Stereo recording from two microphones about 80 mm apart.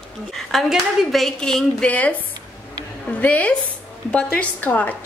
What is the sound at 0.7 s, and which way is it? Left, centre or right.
Speech, centre.